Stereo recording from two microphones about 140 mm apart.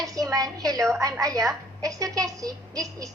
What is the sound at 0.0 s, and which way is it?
A woman's voice, 25° right (ahead or behind).